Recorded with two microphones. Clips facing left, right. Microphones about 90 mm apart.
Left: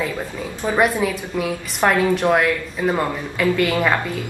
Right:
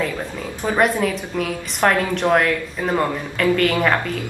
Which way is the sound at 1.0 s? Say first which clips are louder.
Even; 5° left (ahead or behind).